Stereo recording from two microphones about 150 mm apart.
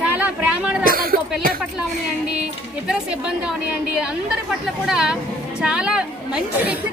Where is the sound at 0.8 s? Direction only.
75° right (ahead or behind).